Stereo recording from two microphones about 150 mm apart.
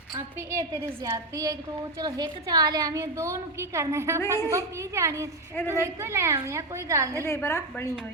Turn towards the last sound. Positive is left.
turn(degrees=20)  # may be behind; listen again after turning